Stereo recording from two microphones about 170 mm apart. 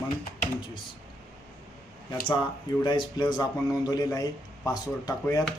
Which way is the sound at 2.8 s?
25° left (ahead or behind).